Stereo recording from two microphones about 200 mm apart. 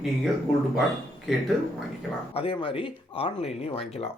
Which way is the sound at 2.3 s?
30° left (ahead or behind).